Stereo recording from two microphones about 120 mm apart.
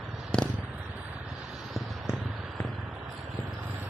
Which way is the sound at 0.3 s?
10° left (ahead or behind).